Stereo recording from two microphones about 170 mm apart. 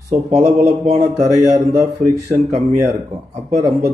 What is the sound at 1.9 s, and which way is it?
Speech, 40° right (ahead or behind).